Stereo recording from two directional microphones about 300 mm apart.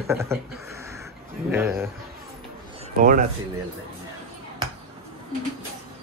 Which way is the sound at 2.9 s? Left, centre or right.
Right.